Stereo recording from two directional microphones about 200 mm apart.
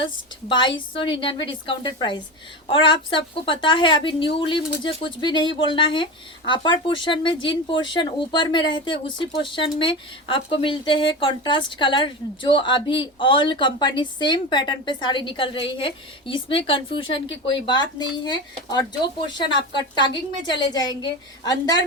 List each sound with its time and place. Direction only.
0.0 s a woman's voice: 25° left (ahead or behind)